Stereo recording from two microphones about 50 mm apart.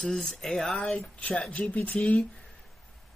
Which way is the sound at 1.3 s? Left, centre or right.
Centre.